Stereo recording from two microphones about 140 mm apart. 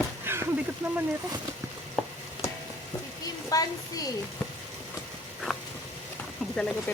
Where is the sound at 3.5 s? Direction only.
25° left (ahead or behind).